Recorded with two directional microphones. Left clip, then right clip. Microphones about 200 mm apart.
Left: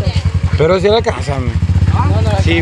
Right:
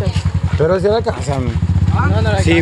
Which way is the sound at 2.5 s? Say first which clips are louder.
Right 1 dB; 20° right (ahead or behind).